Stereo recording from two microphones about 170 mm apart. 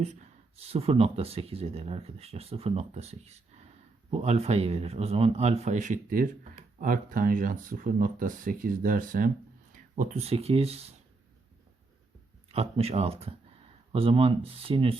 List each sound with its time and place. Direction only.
0.0 s speech: 40° right (ahead or behind)
12.5 s speech: 35° right (ahead or behind)